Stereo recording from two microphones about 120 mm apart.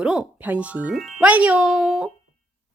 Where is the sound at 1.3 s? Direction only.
10° right (ahead or behind).